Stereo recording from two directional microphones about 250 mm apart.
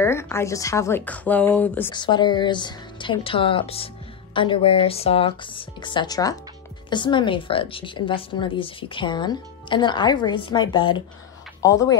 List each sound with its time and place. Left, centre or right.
0.0 s speech: centre
1.9 s speech: centre